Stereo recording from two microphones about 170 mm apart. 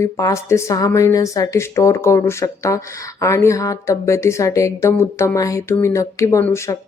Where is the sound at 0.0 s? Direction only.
15° left (ahead or behind).